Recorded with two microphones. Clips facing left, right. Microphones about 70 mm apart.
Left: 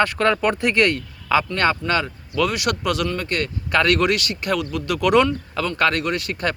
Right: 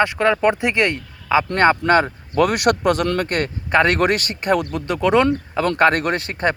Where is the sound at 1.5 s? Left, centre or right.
Right.